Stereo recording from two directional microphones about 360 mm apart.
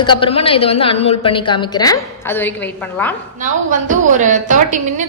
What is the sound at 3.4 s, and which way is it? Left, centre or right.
A woman's voice, right.